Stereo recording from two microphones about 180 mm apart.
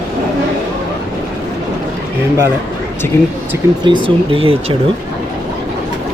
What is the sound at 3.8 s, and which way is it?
Speech, 25° right (ahead or behind).